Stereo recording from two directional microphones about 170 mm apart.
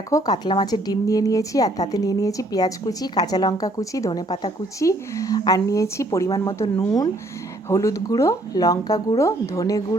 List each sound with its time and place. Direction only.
0.1 s a woman's voice: 20° left (ahead or behind)